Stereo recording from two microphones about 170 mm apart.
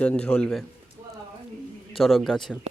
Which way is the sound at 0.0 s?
5° left (ahead or behind).